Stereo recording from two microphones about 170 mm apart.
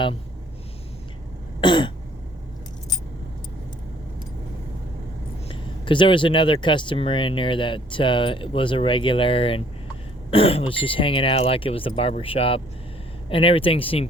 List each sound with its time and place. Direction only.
1.6 s speech: 25° left (ahead or behind)
5.5 s speech: 30° left (ahead or behind)